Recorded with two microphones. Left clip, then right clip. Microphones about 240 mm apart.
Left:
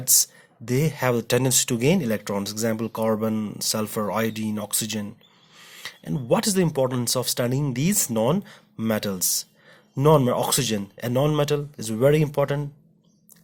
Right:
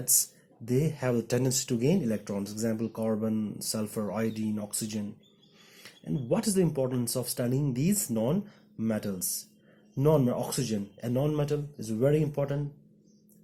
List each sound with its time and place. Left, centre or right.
0.1 s speech: left